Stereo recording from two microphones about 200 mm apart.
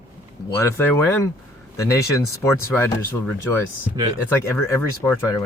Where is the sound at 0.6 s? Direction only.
15° left (ahead or behind).